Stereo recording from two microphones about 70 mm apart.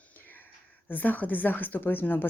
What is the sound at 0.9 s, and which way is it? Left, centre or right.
Speech, left.